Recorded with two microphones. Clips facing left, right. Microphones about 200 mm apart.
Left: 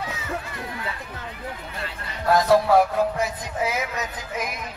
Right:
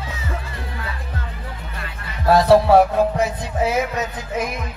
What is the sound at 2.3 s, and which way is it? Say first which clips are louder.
Music: right 5 dB; 30° right (ahead or behind).